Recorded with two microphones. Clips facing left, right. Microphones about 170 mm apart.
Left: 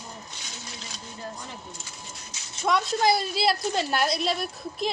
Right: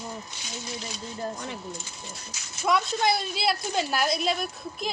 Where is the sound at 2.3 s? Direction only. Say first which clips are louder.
Even; 25° left (ahead or behind).